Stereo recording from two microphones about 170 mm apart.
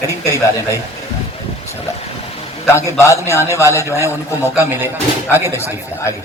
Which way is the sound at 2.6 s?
15° left (ahead or behind).